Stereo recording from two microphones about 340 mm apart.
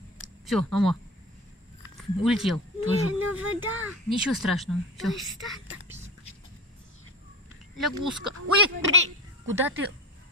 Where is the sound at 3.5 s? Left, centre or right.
Right.